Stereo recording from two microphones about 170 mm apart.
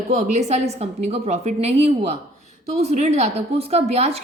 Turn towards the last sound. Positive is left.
turn(degrees=-40)  # may be behind; listen again after turning